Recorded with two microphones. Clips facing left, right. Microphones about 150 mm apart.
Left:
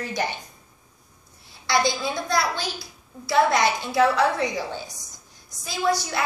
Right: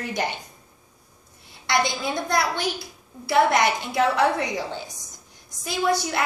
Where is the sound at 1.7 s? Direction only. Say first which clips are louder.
Left 1 dB; 20° right (ahead or behind).